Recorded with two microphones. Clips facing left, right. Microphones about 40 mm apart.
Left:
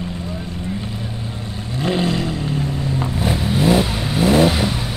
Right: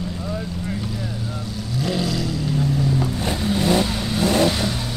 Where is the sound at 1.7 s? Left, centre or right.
Left.